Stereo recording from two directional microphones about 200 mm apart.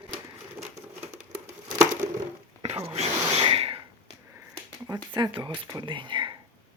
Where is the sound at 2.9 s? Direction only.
30° right (ahead or behind).